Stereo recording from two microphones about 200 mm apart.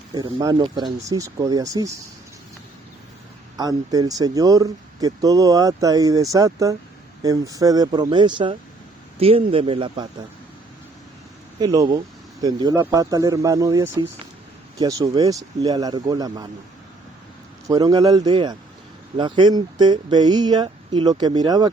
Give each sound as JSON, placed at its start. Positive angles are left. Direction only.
{"t": 0.1, "sound": "speech", "side_deg": -25}
{"t": 3.6, "sound": "speech", "side_deg": -20}
{"t": 11.6, "sound": "speech", "side_deg": -20}
{"t": 17.7, "sound": "speech", "side_deg": -20}